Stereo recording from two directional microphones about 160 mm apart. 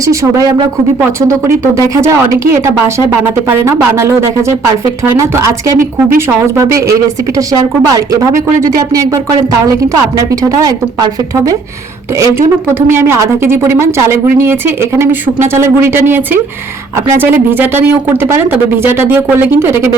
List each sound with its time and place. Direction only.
0.0 s a woman's voice: 20° right (ahead or behind)
2.0 s a woman's voice: 20° right (ahead or behind)
9.9 s a woman's voice: 20° right (ahead or behind)